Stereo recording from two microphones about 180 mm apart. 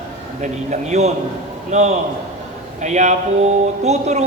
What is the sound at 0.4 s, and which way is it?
A man's voice, 40° right (ahead or behind).